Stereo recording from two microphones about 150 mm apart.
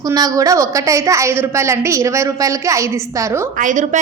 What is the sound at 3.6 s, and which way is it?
Speech, 55° right (ahead or behind).